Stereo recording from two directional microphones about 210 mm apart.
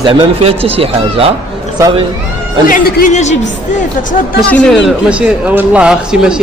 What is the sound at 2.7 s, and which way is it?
Speech, 35° left (ahead or behind).